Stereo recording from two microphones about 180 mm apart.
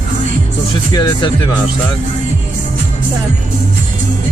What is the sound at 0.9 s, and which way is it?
Speech, 20° left (ahead or behind).